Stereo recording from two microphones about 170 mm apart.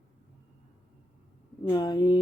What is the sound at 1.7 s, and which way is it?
Speech, 25° left (ahead or behind).